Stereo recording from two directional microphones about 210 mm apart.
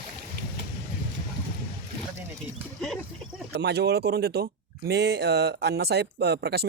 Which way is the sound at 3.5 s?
50° right (ahead or behind).